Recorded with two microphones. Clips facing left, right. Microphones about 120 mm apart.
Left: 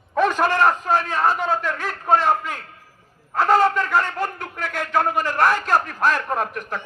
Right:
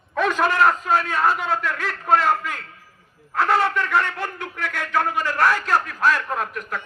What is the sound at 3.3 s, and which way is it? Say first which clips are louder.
A man's voice: left 3 dB; 40° left (ahead or behind).